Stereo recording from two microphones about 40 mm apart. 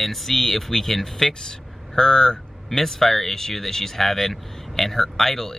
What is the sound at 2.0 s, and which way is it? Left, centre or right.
Speech, centre.